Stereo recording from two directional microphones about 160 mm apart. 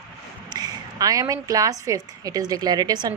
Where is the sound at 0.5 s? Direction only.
25° right (ahead or behind).